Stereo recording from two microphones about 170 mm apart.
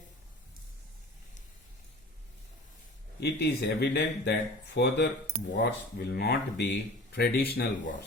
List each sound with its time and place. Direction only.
3.2 s speech: 75° left (ahead or behind)
5.5 s speech: 65° left (ahead or behind)